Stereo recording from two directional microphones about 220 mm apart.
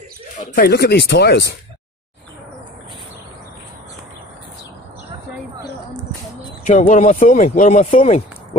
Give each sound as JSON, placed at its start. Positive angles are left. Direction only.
{"t": 0.6, "sound": "speech", "side_deg": 45}
{"t": 6.6, "sound": "speech", "side_deg": 35}